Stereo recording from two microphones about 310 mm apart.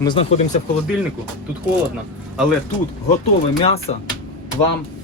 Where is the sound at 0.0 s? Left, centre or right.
Centre.